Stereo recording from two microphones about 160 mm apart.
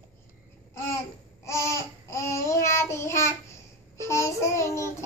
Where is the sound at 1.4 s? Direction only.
15° left (ahead or behind).